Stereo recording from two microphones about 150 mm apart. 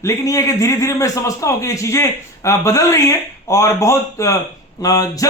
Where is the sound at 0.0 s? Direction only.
20° left (ahead or behind).